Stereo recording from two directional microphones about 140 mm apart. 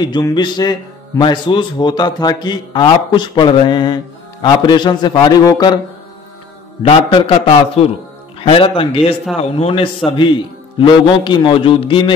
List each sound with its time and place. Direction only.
0.0 s a man's voice: 30° left (ahead or behind)
6.8 s a man's voice: 40° left (ahead or behind)